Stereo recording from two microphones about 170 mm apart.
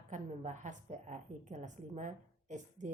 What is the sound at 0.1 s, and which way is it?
A woman's voice, 45° right (ahead or behind).